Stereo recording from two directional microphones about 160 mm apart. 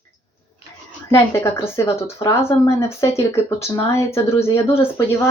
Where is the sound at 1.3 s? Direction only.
15° left (ahead or behind).